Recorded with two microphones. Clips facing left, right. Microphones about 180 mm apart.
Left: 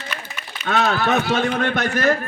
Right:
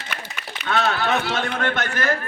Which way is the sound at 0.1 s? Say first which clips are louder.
Even; 65° right (ahead or behind).